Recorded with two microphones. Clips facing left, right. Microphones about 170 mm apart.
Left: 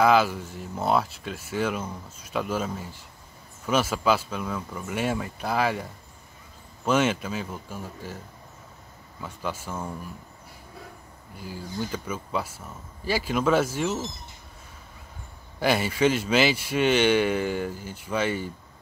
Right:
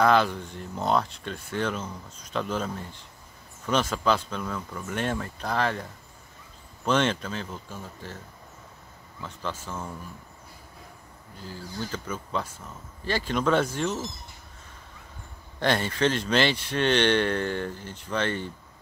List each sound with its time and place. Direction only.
0.0 s speech: 5° left (ahead or behind)
9.2 s speech: 10° left (ahead or behind)
11.3 s speech: 10° left (ahead or behind)
15.6 s speech: 10° left (ahead or behind)